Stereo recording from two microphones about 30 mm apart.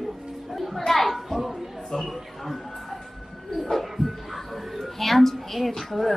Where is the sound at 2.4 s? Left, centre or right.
Centre.